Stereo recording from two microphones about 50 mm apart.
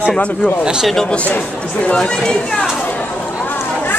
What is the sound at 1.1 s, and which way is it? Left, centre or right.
Speech, left.